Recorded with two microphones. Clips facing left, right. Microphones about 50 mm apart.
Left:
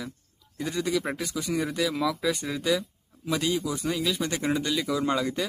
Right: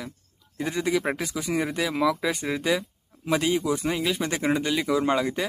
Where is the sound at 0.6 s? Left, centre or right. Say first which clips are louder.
Right 2 dB; right.